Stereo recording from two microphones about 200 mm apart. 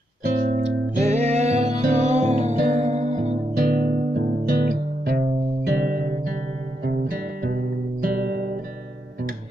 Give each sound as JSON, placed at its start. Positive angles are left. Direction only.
{"t": 0.6, "sound": "music", "side_deg": -35}